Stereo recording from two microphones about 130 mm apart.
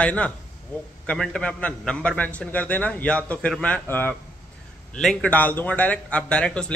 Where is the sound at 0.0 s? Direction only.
10° left (ahead or behind).